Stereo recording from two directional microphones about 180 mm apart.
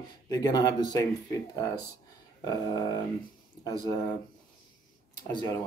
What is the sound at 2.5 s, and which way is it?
Speech, 20° left (ahead or behind).